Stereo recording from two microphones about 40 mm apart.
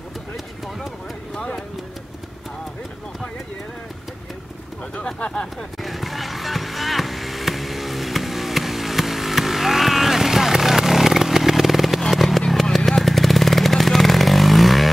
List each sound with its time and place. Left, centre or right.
5.0 s speech: left
5.8 s music: centre
12.1 s vehicle: centre
12.6 s motorcycle: centre